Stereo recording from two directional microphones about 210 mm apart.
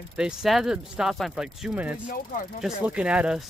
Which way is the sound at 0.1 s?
5° right (ahead or behind).